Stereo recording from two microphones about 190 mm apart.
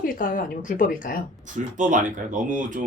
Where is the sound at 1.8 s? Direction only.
40° right (ahead or behind).